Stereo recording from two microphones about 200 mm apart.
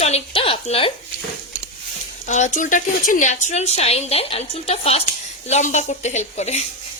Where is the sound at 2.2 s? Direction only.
35° left (ahead or behind).